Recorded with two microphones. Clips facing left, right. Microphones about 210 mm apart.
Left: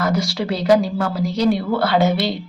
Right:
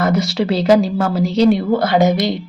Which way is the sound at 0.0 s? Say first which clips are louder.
Right 4 dB; 20° right (ahead or behind).